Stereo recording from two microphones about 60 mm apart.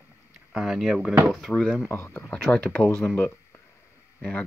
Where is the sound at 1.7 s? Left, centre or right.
Left.